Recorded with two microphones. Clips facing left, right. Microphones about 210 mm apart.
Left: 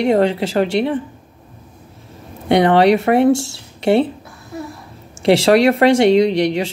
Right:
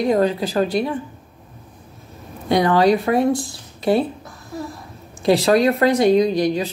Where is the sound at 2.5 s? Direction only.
70° left (ahead or behind).